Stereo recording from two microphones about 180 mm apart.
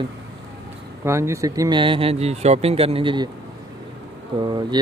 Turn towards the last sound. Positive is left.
turn(degrees=-25)  # may be behind; listen again after turning